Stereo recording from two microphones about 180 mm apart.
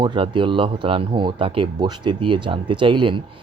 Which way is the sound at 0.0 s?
25° right (ahead or behind).